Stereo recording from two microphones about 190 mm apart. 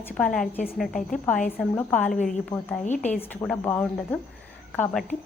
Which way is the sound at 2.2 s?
40° left (ahead or behind).